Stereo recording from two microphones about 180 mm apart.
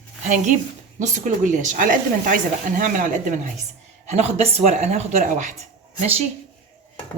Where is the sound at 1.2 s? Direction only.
45° right (ahead or behind).